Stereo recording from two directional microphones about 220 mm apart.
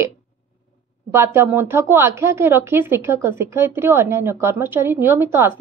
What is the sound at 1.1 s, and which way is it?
Speech, 10° right (ahead or behind).